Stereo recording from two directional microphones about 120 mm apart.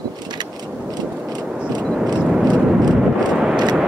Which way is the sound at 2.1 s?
5° right (ahead or behind).